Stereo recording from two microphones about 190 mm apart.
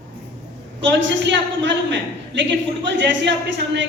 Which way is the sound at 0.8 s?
75° right (ahead or behind).